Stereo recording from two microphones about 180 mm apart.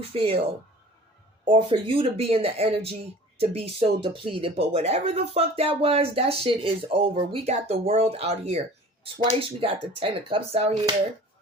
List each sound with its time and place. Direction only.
0.1 s speech: 35° right (ahead or behind)
1.5 s speech: 30° right (ahead or behind)